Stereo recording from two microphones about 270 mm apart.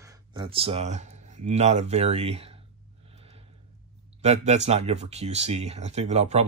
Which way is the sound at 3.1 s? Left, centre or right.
Right.